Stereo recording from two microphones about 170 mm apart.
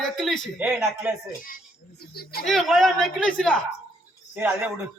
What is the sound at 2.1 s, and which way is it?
Speech, 65° left (ahead or behind).